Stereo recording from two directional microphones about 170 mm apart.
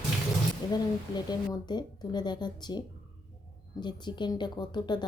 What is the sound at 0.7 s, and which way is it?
A woman's voice, 25° left (ahead or behind).